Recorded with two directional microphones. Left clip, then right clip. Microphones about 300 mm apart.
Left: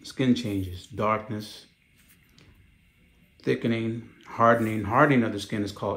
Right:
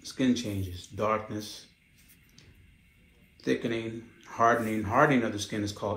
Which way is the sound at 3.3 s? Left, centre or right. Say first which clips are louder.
Left 3 dB; left.